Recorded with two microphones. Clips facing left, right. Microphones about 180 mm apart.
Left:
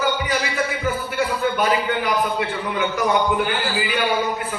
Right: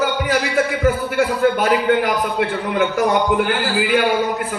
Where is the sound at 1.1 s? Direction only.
85° right.